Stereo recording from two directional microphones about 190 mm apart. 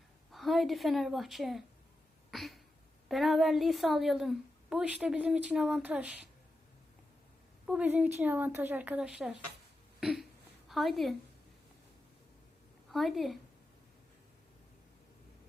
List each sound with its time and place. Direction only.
0.3 s a woman's voice: centre (ahead or behind)
7.7 s a woman's voice: 5° right (ahead or behind)
12.9 s a woman's voice: centre (ahead or behind)